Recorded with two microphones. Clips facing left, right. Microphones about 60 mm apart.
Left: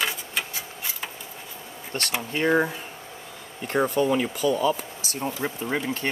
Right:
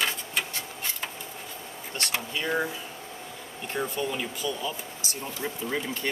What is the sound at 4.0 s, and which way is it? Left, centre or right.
Speech, left.